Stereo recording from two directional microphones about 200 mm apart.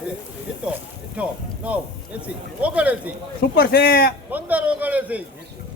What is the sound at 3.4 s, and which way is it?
Speech, 50° left (ahead or behind).